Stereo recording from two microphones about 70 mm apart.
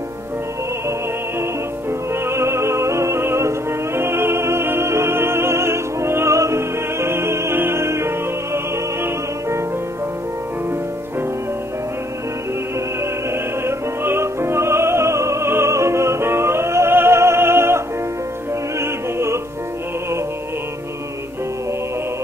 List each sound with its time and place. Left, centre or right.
1.4 s music: right
13.3 s music: right